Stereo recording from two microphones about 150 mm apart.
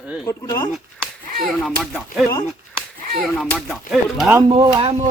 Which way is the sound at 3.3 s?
5° left (ahead or behind).